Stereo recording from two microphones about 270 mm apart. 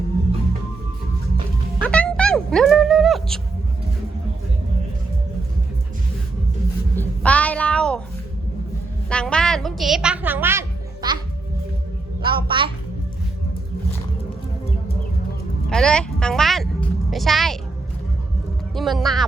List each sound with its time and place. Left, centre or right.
1.8 s music: centre
6.9 s a sound: centre
9.0 s a woman's voice: centre
12.2 s a sound: centre
15.7 s music: centre
18.7 s speech: centre